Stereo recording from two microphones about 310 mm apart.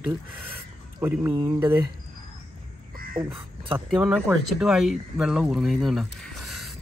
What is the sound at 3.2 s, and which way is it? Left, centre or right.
Speech, centre.